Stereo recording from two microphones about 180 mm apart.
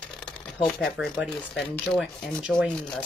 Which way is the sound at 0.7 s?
Centre (ahead or behind).